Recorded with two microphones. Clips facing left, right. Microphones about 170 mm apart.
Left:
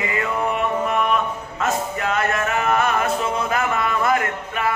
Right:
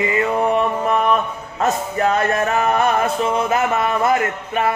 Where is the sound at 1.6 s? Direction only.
35° right (ahead or behind).